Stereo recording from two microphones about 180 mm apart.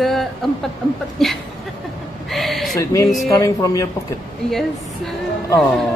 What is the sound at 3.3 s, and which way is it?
Speech, 15° left (ahead or behind).